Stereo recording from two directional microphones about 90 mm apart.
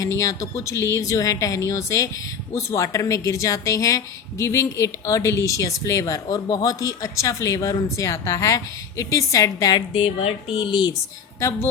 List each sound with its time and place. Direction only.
0.0 s a woman's voice: 35° left (ahead or behind)
10.0 s speech: 90° left; by 10.9 s 60° left (ahead or behind)
11.3 s a woman's voice: 30° left (ahead or behind)